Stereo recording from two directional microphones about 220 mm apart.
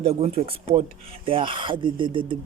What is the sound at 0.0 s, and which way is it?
Speech, 30° right (ahead or behind).